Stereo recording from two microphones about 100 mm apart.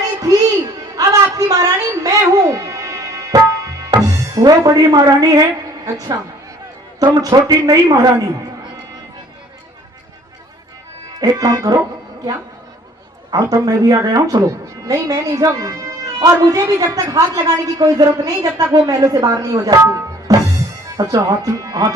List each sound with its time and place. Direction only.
0.2 s music: 35° right (ahead or behind)
0.9 s a sound: 35° right (ahead or behind)
4.0 s speech: 40° right (ahead or behind)
7.0 s a woman's voice: 35° right (ahead or behind)
11.2 s a woman's voice: 35° right (ahead or behind)
13.3 s a woman's voice: 35° right (ahead or behind)